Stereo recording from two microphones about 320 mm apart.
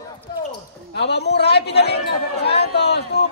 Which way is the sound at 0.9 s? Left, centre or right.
Left.